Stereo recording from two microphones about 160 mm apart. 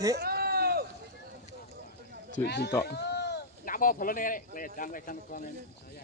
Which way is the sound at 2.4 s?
90° left.